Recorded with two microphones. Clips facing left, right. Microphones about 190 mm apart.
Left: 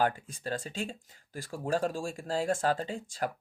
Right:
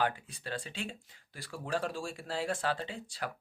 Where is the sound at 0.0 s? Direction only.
45° left (ahead or behind).